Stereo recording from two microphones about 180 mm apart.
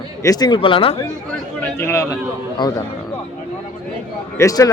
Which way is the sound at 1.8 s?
15° left (ahead or behind).